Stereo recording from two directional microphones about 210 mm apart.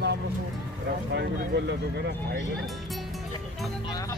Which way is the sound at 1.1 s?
55° right (ahead or behind).